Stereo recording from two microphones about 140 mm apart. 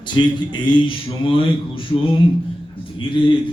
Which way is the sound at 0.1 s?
35° left (ahead or behind).